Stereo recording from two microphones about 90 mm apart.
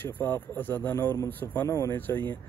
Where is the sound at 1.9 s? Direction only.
20° left (ahead or behind).